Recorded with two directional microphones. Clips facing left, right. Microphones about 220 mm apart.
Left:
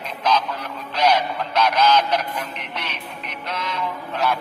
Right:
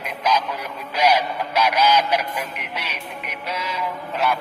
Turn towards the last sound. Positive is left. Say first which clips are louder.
# even
turn(degrees=-5)  # may be behind; listen again after turning